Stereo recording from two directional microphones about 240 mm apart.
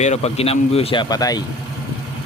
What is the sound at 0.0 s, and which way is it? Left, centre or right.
Speech, left.